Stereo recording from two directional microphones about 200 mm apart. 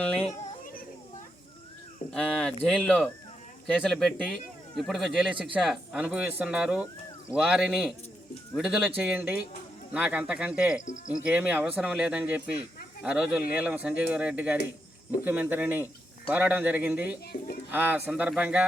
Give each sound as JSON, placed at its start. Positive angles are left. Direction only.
{"t": 0.0, "sound": "speech", "side_deg": 5}
{"t": 0.3, "sound": "a sound", "side_deg": 45}
{"t": 2.0, "sound": "speech", "side_deg": 5}
{"t": 10.8, "sound": "speech", "side_deg": 40}
{"t": 11.1, "sound": "speech", "side_deg": -5}